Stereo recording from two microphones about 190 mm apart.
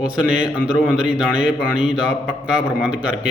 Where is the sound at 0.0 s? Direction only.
5° right (ahead or behind).